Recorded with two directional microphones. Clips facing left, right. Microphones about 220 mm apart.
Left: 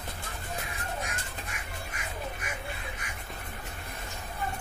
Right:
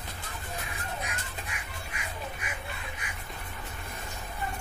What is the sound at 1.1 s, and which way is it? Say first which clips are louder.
Crow: even; 45° left (ahead or behind).